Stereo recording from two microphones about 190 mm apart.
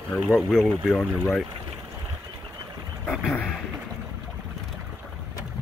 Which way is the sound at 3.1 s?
Centre (ahead or behind).